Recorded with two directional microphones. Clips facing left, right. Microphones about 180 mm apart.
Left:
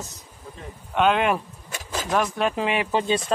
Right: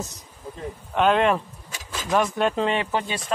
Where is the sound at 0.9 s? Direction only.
Centre (ahead or behind).